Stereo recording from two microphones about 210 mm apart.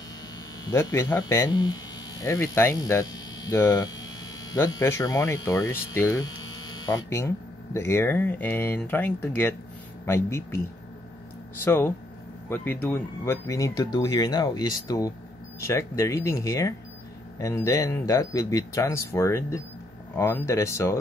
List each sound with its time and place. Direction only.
0.7 s speech: 15° left (ahead or behind)
11.6 s speech: 10° left (ahead or behind)